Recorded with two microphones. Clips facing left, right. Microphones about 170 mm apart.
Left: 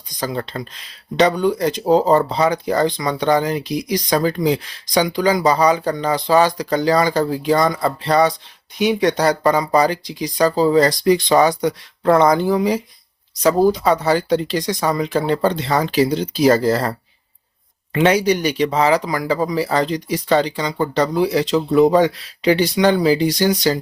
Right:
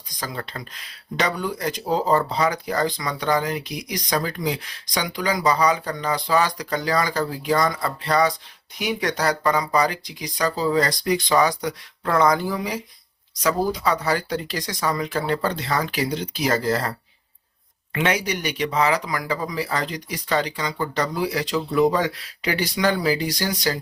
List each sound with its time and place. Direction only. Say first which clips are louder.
0.2 s speech: left 8 dB; 25° left (ahead or behind)
17.9 s speech: left 8 dB; 30° left (ahead or behind)